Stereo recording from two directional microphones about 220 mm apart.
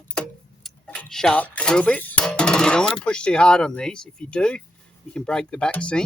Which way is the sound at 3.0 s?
5° left (ahead or behind).